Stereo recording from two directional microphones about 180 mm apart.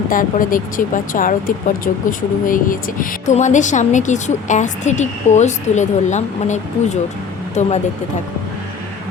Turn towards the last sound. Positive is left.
turn(degrees=40)  # may be behind; listen again after turning